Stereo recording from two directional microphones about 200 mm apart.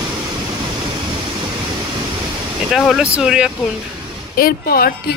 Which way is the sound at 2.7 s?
Centre (ahead or behind).